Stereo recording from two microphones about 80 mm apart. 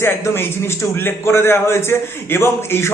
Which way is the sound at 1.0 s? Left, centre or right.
Left.